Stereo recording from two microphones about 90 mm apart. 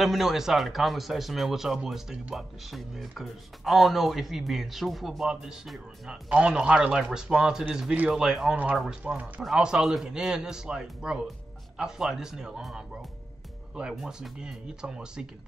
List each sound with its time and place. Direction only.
0.0 s speech: centre (ahead or behind)
9.0 s a man's voice: 15° right (ahead or behind)